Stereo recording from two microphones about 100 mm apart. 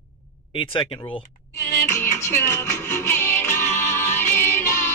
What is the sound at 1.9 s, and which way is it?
Music, 25° left (ahead or behind).